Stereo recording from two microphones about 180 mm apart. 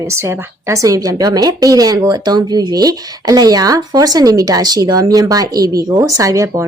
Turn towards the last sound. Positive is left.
turn(degrees=-15)  # may be behind; listen again after turning